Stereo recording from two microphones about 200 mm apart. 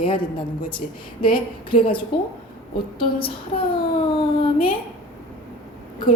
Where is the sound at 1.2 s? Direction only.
25° left (ahead or behind).